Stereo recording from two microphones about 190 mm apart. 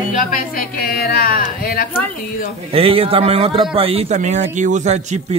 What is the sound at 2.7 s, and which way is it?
A man's voice, 30° right (ahead or behind).